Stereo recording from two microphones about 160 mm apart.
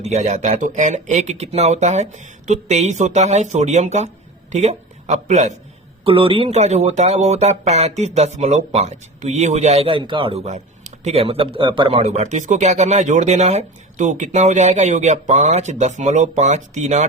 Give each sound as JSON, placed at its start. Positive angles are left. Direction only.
{"t": 0.0, "sound": "speech", "side_deg": -45}
{"t": 6.1, "sound": "speech", "side_deg": -35}